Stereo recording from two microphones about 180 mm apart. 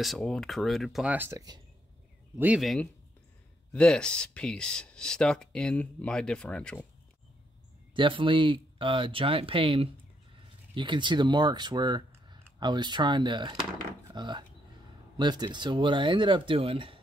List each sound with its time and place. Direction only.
0.0 s speech: centre (ahead or behind); by 1.6 s 20° right (ahead or behind)
2.3 s speech: 10° right (ahead or behind)
7.9 s speech: 30° right (ahead or behind)